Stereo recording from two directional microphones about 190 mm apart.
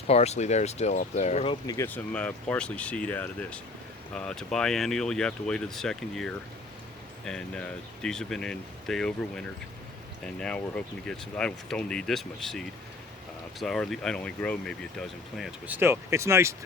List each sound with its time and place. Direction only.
0.1 s speech: 35° left (ahead or behind)
1.6 s speech: 15° left (ahead or behind)
10.4 s speech: 5° left (ahead or behind); by 16.6 s 15° right (ahead or behind)